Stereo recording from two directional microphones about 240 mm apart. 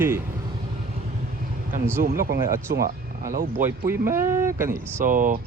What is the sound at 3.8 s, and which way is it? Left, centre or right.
Speech, centre.